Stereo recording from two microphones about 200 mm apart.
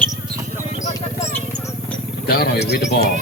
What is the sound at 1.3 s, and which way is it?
Vehicle, 10° left (ahead or behind).